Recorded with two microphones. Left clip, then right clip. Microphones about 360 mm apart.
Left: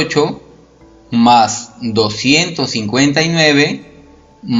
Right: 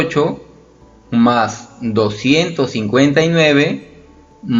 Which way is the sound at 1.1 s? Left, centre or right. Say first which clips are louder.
Left 5 dB; centre.